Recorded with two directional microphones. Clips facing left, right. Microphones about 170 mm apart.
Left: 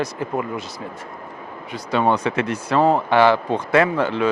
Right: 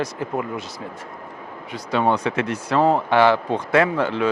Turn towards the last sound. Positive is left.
turn(degrees=15)  # may be behind; listen again after turning